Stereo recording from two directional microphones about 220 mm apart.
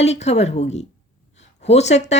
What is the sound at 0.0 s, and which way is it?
Speech, 30° left (ahead or behind).